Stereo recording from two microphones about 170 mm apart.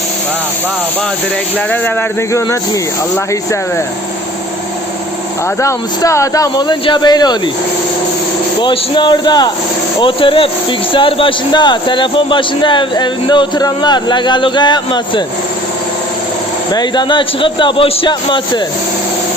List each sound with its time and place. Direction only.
1.5 s speech: 10° left (ahead or behind)
5.5 s speech: 15° left (ahead or behind)
8.6 s speech: 30° left (ahead or behind)
16.7 s speech: 25° left (ahead or behind)